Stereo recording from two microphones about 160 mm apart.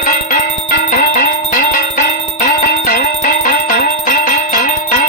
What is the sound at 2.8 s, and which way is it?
Music, 60° left (ahead or behind).